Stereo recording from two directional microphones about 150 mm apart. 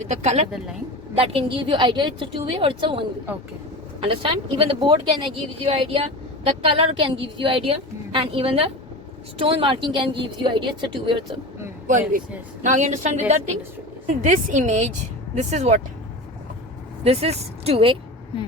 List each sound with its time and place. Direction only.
0.0 s a woman's voice: 50° right (ahead or behind)
4.0 s speech: 35° right (ahead or behind)
11.9 s a woman's voice: 60° right (ahead or behind)
17.0 s speech: 45° right (ahead or behind)